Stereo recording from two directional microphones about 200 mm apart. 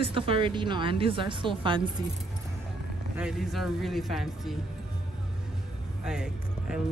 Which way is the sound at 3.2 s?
5° right (ahead or behind).